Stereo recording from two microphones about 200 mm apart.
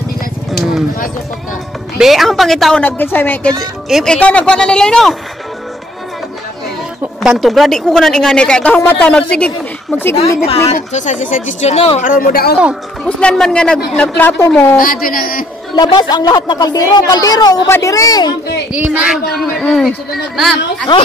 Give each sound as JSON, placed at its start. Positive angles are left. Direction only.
{"t": 0.5, "sound": "a sound", "side_deg": 0}
{"t": 2.0, "sound": "a woman's voice", "side_deg": 0}
{"t": 7.2, "sound": "a woman's voice", "side_deg": 0}
{"t": 10.1, "sound": "speech", "side_deg": 30}
{"t": 12.0, "sound": "speech", "side_deg": 45}
{"t": 12.5, "sound": "a woman's voice", "side_deg": -5}
{"t": 14.8, "sound": "speech", "side_deg": 45}
{"t": 15.7, "sound": "a woman's voice", "side_deg": 20}
{"t": 18.7, "sound": "a woman's voice", "side_deg": -5}